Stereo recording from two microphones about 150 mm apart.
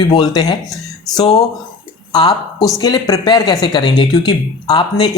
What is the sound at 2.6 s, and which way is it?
Speech, 25° left (ahead or behind).